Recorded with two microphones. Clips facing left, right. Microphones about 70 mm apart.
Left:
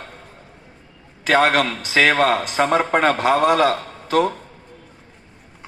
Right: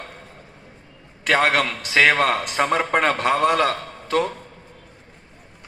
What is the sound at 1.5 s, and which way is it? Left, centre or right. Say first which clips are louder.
A man's voice: left 2 dB; centre.